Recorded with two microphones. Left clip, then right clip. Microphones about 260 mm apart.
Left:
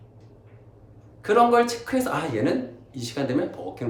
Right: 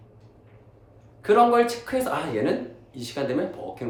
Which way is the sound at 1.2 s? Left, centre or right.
Centre.